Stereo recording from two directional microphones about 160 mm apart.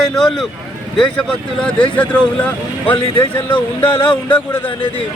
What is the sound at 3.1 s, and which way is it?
Speech, 30° left (ahead or behind).